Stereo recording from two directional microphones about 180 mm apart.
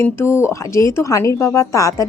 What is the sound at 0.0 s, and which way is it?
A woman's voice, 15° left (ahead or behind).